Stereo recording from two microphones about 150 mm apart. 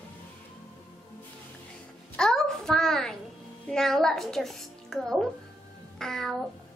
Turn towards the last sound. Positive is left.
turn(degrees=5)  # may be behind; listen again after turning